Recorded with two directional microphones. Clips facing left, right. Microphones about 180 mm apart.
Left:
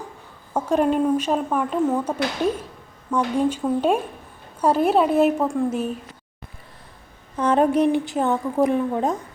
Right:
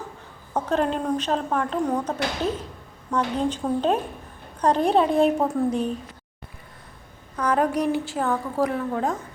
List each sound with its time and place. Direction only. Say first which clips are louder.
0.5 s a woman's voice: left 4 dB; 10° left (ahead or behind)
7.3 s a woman's voice: left 4 dB; 25° left (ahead or behind)